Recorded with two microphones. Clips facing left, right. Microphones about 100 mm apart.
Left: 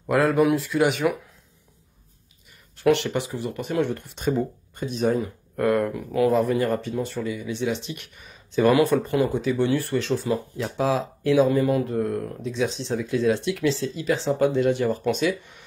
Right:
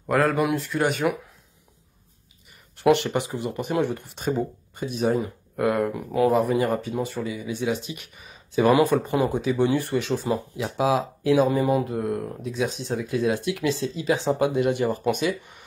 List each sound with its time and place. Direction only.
0.0 s speech: centre (ahead or behind)
3.1 s speech: 15° right (ahead or behind)
6.3 s speech: 15° right (ahead or behind)
8.6 s speech: 15° right (ahead or behind)
13.7 s speech: 20° right (ahead or behind)